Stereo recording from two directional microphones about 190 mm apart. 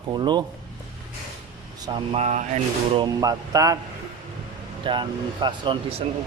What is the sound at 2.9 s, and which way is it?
Speech, 20° right (ahead or behind).